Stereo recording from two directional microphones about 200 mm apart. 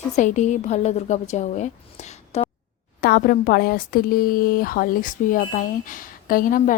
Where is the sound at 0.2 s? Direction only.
35° left (ahead or behind).